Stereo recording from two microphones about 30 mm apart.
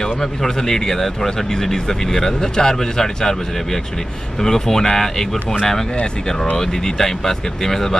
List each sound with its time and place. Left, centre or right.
0.0 s speech: centre
6.5 s speech: centre